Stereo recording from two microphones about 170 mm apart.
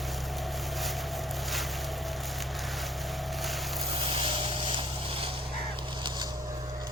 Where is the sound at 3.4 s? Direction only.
Centre (ahead or behind).